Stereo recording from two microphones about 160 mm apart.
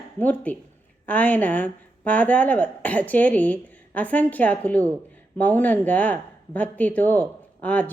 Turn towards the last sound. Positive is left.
turn(degrees=10)  # may be behind; listen again after turning